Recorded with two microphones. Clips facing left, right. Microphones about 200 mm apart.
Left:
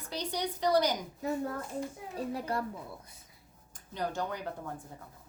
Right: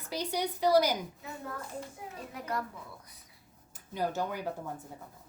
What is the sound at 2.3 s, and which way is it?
Speech, 30° left (ahead or behind).